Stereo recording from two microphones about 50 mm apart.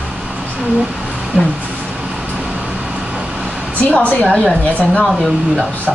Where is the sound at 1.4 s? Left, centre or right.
Centre.